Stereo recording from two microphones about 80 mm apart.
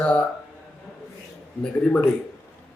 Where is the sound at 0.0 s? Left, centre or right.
Centre.